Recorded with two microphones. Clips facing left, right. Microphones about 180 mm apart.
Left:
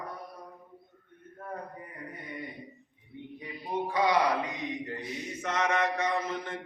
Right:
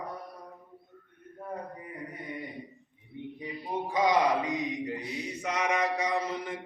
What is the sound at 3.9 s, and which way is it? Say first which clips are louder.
Mantra: right 1 dB; 20° right (ahead or behind).